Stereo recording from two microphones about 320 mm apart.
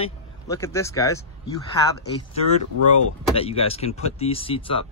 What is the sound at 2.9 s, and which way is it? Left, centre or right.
Speech, centre.